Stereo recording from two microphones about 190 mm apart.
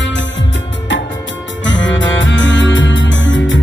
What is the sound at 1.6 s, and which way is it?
Music, 75° left (ahead or behind).